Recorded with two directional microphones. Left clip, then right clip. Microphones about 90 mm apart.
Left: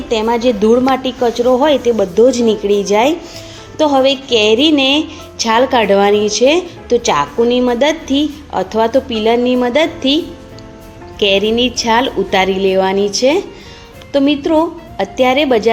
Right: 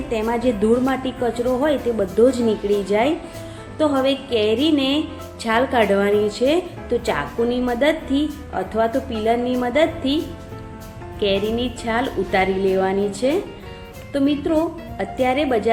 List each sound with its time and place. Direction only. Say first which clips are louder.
0.1 s a woman's voice: left 8 dB; 25° left (ahead or behind); by 10.2 s 40° left (ahead or behind)
11.2 s a woman's voice: left 9 dB; 50° left (ahead or behind)